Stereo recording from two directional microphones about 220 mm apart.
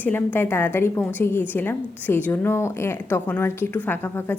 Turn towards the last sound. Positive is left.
turn(degrees=10)  # may be behind; listen again after turning